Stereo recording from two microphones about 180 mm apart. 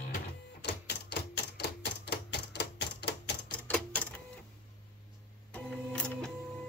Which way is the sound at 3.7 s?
5° left (ahead or behind).